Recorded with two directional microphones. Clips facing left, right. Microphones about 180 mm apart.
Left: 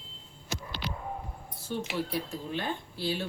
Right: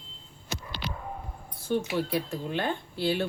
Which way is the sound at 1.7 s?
60° right (ahead or behind).